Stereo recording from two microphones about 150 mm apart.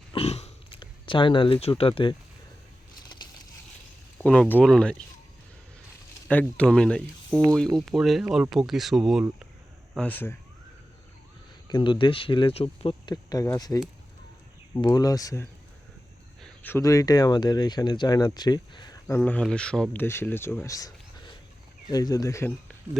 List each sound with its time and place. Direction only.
0.1 s a sound: 40° left (ahead or behind)
4.2 s speech: 10° left (ahead or behind)
6.2 s speech: 10° left (ahead or behind)
9.9 s speech: 10° left (ahead or behind)
11.7 s speech: 35° left (ahead or behind)
13.3 s speech: 25° left (ahead or behind)
14.8 s speech: 25° left (ahead or behind)
19.0 s speech: 15° left (ahead or behind)